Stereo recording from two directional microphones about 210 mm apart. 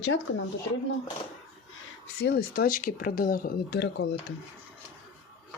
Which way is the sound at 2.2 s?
50° left (ahead or behind).